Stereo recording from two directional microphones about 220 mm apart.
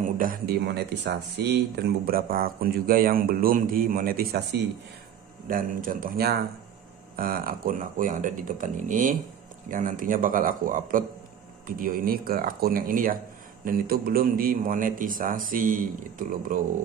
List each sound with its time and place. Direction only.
0.2 s speech: 40° right (ahead or behind)